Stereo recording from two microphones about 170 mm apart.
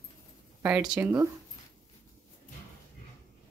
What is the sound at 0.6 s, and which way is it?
Speech, 10° right (ahead or behind).